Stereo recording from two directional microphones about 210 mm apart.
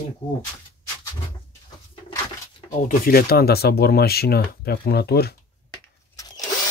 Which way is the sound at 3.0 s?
45° left (ahead or behind).